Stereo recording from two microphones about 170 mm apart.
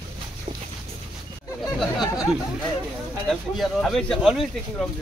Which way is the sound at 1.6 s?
20° left (ahead or behind).